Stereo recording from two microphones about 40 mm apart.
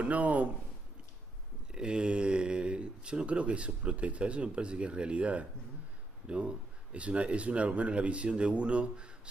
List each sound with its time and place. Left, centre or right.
0.0 s speech: right
1.7 s speech: right